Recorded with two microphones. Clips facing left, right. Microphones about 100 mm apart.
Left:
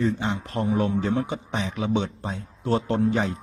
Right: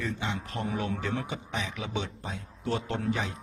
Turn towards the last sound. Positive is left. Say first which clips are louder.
# left 8 dB
turn(degrees=35)  # may be behind; listen again after turning